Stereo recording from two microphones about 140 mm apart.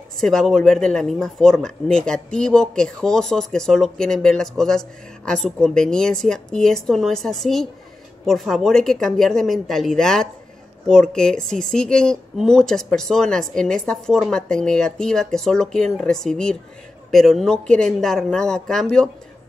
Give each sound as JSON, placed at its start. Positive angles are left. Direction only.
{"t": 0.2, "sound": "speech", "side_deg": 5}